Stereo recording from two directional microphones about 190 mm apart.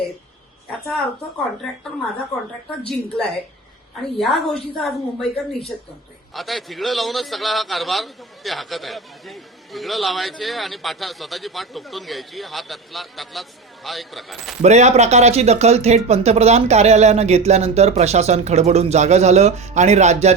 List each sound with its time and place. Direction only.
2.9 s a man's voice: centre (ahead or behind)
14.6 s speech: 35° right (ahead or behind)